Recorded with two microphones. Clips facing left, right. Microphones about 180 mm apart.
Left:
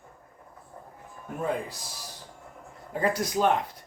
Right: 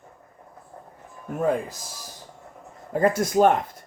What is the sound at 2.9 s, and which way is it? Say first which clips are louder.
Speech: right 7 dB; 45° right (ahead or behind).